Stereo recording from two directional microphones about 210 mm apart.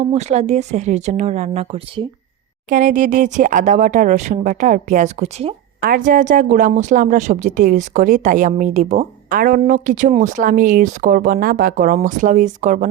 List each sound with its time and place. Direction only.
0.0 s a woman's voice: 30° right (ahead or behind)
2.6 s a woman's voice: 40° right (ahead or behind)
5.8 s a woman's voice: 40° right (ahead or behind)